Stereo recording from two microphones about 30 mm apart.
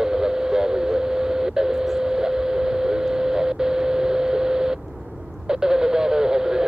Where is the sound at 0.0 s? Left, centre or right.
Right.